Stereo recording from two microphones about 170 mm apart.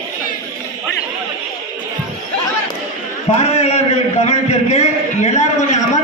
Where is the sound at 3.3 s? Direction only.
40° left (ahead or behind).